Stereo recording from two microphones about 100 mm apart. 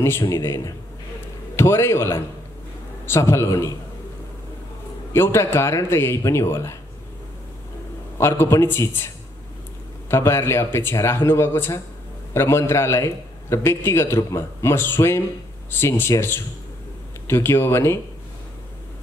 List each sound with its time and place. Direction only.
0.4 s a man's voice: 25° left (ahead or behind)
5.1 s a man's voice: 25° left (ahead or behind)
8.2 s a man's voice: 25° left (ahead or behind)